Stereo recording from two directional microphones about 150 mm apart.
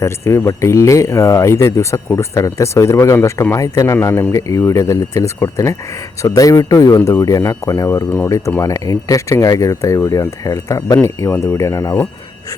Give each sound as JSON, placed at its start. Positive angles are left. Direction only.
{"t": 0.0, "sound": "speech", "side_deg": 15}